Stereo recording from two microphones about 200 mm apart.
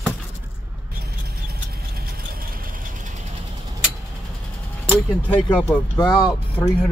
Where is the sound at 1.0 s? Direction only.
50° right (ahead or behind).